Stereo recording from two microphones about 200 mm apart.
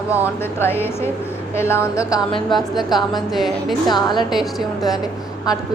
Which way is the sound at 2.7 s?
Centre (ahead or behind).